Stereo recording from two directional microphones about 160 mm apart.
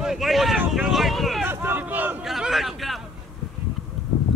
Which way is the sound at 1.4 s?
15° right (ahead or behind).